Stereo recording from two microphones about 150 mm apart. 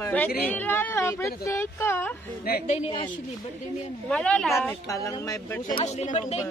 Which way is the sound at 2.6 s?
45° left (ahead or behind).